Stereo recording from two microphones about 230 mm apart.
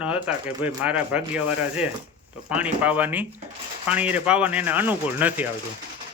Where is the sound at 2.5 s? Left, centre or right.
Centre.